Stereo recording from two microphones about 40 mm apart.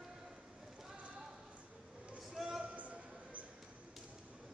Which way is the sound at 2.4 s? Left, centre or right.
Centre.